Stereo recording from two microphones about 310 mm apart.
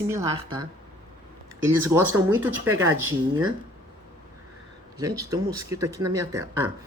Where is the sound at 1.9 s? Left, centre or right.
Centre.